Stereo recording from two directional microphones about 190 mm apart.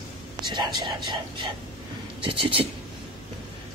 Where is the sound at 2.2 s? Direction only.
25° right (ahead or behind).